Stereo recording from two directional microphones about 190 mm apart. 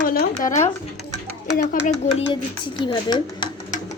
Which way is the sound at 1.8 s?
40° left (ahead or behind).